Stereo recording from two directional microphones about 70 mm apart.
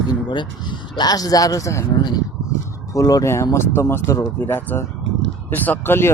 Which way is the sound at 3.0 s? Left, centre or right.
Left.